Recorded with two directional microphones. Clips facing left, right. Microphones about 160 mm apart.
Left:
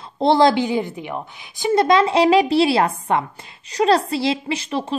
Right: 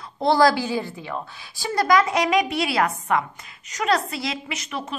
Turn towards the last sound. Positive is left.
turn(degrees=30)  # may be behind; listen again after turning